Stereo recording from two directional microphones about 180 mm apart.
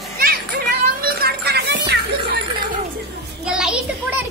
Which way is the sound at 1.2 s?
65° right (ahead or behind).